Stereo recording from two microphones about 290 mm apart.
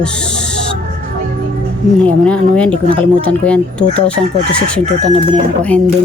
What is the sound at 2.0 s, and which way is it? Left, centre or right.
Speech, centre.